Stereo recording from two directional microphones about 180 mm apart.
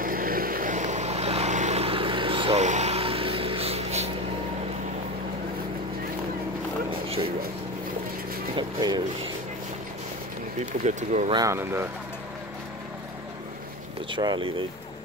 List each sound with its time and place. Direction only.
0.0 s vehicle: 50° right (ahead or behind); by 4.1 s 35° right (ahead or behind)
8.5 s vehicle: 25° right (ahead or behind)
10.6 s speech: 40° right (ahead or behind)
11.2 s speech: 20° right (ahead or behind)
14.1 s speech: 25° right (ahead or behind)